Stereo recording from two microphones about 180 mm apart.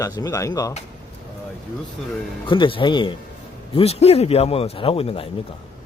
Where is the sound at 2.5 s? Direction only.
25° left (ahead or behind).